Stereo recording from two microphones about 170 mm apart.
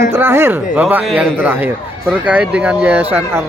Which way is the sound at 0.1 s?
15° right (ahead or behind).